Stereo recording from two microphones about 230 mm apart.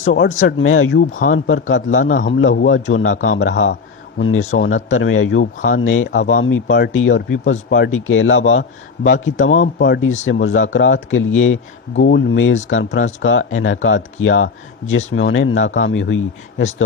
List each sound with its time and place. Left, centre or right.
0.0 s speech: left
4.4 s a man's voice: left
4.6 s speech: left
9.7 s speech: left